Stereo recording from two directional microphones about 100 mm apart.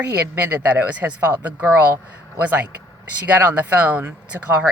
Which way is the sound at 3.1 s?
15° right (ahead or behind).